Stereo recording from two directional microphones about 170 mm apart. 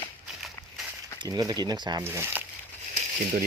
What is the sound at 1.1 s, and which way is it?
Speech, 25° right (ahead or behind).